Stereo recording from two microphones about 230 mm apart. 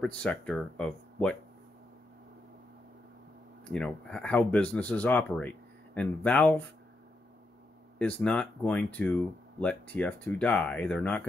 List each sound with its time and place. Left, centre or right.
0.0 s speech: centre
3.6 s speech: centre
8.0 s speech: centre